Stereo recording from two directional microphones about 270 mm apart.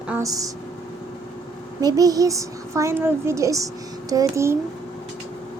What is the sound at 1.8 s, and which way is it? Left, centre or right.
Speech, centre.